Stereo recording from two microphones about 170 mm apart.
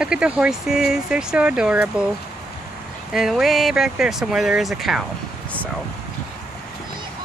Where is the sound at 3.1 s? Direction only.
Centre (ahead or behind).